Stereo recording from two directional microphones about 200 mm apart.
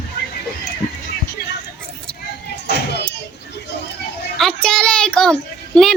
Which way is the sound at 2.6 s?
55° left (ahead or behind).